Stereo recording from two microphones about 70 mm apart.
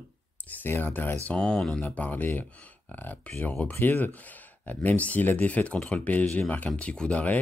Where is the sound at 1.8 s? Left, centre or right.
Left.